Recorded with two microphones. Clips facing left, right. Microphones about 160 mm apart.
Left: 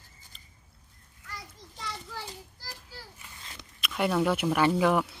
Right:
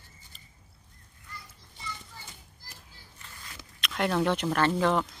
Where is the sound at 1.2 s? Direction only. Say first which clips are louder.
Left 4 dB; 85° left.